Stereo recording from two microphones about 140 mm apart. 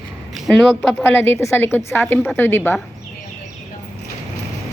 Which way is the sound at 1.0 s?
15° left (ahead or behind).